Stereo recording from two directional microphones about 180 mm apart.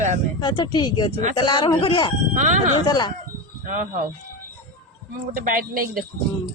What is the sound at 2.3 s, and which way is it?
Speech, 40° right (ahead or behind).